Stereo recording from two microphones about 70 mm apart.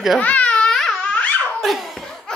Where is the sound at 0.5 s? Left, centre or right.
Centre.